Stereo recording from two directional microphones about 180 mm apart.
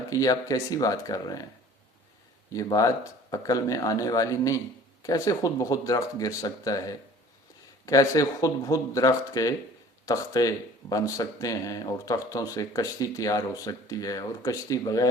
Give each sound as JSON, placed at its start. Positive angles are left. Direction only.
{"t": 0.1, "sound": "speech", "side_deg": 20}
{"t": 2.5, "sound": "speech", "side_deg": 20}